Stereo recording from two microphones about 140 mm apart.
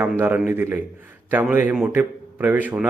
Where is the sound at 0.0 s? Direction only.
15° right (ahead or behind).